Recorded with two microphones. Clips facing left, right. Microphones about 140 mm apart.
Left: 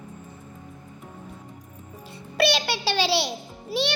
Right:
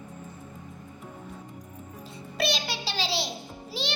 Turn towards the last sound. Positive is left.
turn(degrees=65)  # may be behind; listen again after turning